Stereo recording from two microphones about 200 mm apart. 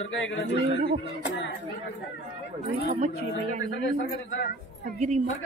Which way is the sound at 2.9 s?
40° right (ahead or behind).